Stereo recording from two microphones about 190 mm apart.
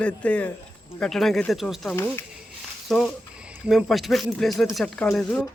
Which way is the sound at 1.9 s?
15° left (ahead or behind).